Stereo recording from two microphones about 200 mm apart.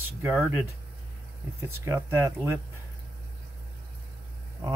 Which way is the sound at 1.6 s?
15° right (ahead or behind).